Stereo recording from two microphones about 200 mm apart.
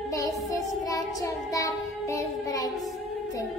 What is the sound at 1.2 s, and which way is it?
Child singing, 15° left (ahead or behind).